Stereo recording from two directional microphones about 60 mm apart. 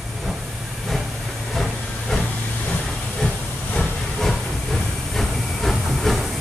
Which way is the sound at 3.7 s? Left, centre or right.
Centre.